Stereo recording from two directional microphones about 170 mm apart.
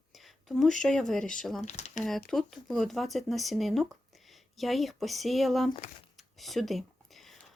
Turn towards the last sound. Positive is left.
turn(degrees=0)  # may be behind; listen again after turning